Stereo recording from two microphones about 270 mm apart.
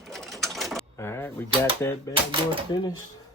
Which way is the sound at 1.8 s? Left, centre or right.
Centre.